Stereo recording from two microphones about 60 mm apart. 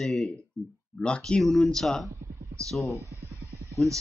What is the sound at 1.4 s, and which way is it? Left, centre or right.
Speech, centre.